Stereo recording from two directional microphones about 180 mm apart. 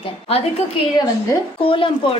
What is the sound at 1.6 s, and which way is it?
Speech, 30° left (ahead or behind).